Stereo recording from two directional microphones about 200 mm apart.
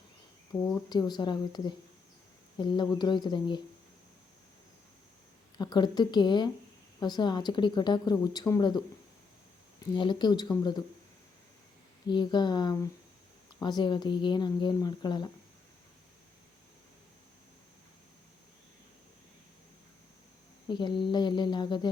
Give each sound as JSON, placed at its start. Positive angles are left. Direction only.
{"t": 0.5, "sound": "speech", "side_deg": 15}
{"t": 5.5, "sound": "speech", "side_deg": 20}
{"t": 9.9, "sound": "speech", "side_deg": 20}
{"t": 12.0, "sound": "speech", "side_deg": 20}
{"t": 20.7, "sound": "speech", "side_deg": 25}